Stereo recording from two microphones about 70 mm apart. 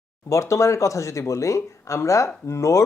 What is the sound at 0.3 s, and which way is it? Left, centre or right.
Speech, left.